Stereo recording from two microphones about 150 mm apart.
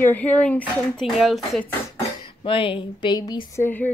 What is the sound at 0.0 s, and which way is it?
Speech, 10° left (ahead or behind).